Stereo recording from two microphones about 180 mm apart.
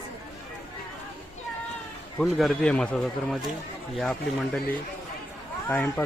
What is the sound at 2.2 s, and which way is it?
A man's voice, centre (ahead or behind).